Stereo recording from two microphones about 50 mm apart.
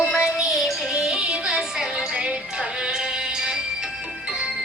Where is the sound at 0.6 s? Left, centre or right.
Centre.